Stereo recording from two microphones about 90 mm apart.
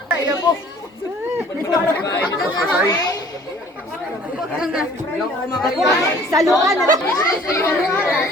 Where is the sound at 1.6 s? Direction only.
40° left (ahead or behind).